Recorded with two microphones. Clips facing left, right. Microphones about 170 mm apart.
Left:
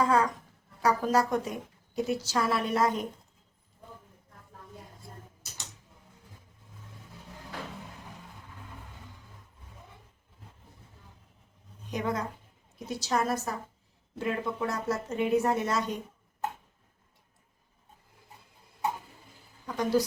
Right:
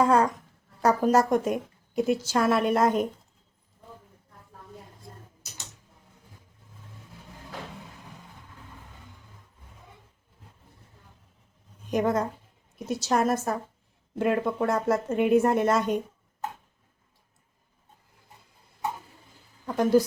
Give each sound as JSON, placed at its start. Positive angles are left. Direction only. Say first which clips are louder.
{"t": 0.0, "sound": "a sound", "louder": "right 4 dB", "side_deg": -50}
{"t": 0.8, "sound": "a woman's voice", "louder": "right 4 dB", "side_deg": -45}
{"t": 11.9, "sound": "a woman's voice", "louder": "right 7 dB", "side_deg": -50}
{"t": 19.6, "sound": "a woman's voice", "louder": "right 6 dB", "side_deg": -50}